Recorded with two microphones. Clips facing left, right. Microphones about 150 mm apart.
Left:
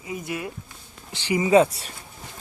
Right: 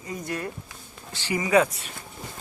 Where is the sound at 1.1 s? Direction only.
20° left (ahead or behind).